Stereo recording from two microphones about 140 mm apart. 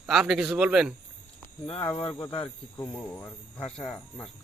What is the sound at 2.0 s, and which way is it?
Speech, 35° left (ahead or behind).